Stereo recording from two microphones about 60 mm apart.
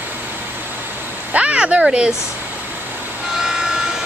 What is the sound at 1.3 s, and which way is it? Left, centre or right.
Speech, right.